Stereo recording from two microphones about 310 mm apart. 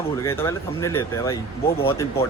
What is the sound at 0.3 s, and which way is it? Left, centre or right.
Speech, centre.